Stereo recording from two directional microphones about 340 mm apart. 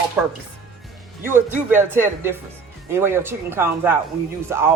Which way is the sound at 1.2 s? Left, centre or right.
Centre.